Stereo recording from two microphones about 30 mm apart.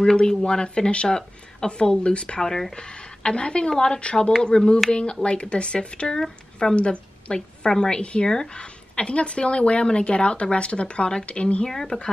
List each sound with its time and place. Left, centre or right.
0.0 s a woman's voice: left
2.4 s speech: centre
2.7 s a woman's voice: left
5.2 s a woman's voice: left
7.3 s a woman's voice: left
11.6 s speech: centre